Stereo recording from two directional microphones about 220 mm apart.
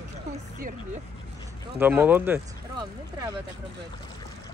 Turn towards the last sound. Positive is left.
turn(degrees=-10)  # may be behind; listen again after turning